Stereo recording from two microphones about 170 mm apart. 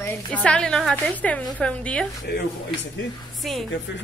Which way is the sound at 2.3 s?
75° left (ahead or behind).